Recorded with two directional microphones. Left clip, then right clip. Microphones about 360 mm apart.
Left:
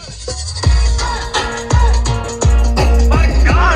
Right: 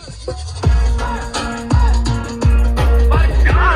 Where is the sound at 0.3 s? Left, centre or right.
Centre.